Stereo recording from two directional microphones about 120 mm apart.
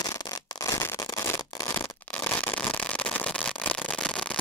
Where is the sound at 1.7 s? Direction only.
20° left (ahead or behind).